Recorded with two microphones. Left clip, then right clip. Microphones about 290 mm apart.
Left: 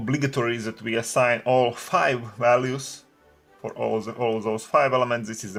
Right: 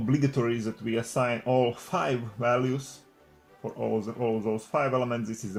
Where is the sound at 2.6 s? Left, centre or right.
Left.